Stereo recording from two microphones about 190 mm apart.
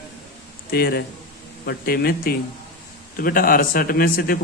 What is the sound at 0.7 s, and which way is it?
A man's voice, 55° left (ahead or behind).